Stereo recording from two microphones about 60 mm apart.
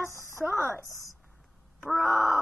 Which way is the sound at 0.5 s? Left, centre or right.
Left.